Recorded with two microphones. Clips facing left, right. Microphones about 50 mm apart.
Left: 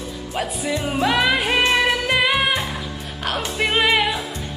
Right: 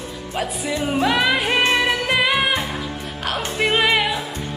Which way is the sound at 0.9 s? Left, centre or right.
Centre.